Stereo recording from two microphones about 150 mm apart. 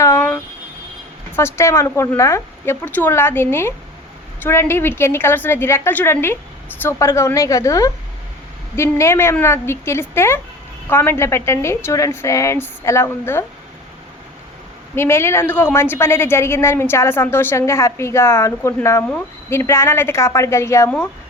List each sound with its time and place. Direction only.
0.0 s a sound: 15° left (ahead or behind)
1.4 s a woman's voice: 15° left (ahead or behind)
14.9 s a woman's voice: 15° left (ahead or behind)